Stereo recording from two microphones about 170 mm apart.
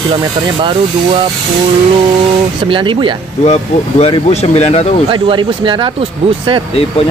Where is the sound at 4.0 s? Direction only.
35° left (ahead or behind).